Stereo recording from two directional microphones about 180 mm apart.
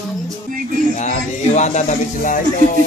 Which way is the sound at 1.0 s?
40° left (ahead or behind).